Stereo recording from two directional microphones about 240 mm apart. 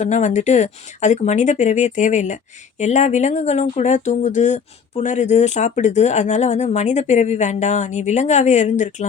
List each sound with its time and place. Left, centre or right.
0.0 s speech: left